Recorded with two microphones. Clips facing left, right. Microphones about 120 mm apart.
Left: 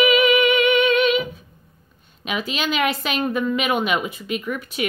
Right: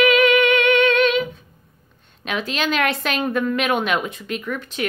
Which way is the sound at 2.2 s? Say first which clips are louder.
Right 1 dB; 5° left (ahead or behind).